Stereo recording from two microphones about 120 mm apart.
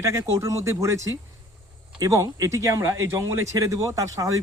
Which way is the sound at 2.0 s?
30° right (ahead or behind).